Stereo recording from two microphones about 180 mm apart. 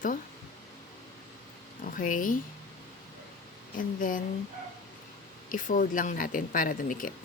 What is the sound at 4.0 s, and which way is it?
Speech, 50° left (ahead or behind).